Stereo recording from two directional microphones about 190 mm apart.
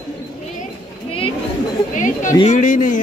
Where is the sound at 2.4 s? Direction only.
40° left (ahead or behind).